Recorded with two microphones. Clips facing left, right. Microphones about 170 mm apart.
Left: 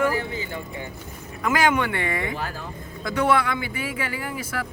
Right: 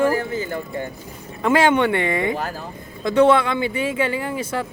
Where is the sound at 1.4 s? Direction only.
30° right (ahead or behind).